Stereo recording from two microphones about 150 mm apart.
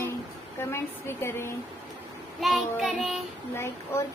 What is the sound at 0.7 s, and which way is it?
Speech, 15° left (ahead or behind).